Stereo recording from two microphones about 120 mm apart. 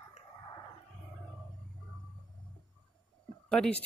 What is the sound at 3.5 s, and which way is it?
Speech, 10° left (ahead or behind).